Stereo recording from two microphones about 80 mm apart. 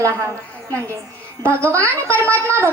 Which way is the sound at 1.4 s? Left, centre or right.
Right.